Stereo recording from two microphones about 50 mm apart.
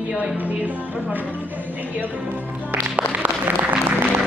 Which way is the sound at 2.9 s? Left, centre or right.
Right.